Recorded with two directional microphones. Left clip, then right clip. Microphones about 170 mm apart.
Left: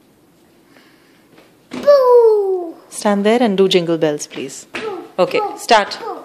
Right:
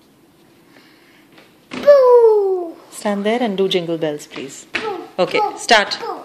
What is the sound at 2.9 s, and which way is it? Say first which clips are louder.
A woman's voice: left 5 dB; 30° left (ahead or behind).